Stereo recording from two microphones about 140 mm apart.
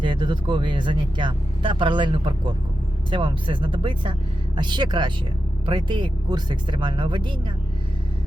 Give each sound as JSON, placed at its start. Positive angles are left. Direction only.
{"t": 0.0, "sound": "speech", "side_deg": -35}